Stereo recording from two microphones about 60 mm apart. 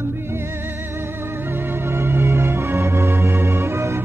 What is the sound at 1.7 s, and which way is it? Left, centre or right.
Music, right.